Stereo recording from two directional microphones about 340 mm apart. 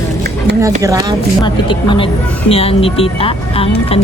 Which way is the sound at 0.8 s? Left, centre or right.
Centre.